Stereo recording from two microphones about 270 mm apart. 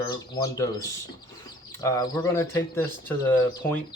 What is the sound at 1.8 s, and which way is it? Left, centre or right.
Speech, centre.